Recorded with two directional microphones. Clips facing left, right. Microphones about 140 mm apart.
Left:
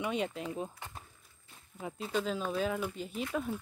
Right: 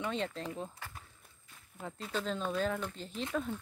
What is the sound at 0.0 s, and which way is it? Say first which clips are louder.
Speech: left 2 dB; 10° left (ahead or behind).